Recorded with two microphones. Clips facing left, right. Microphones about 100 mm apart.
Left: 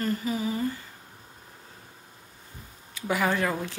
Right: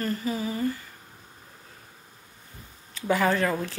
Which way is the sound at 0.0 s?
20° left (ahead or behind).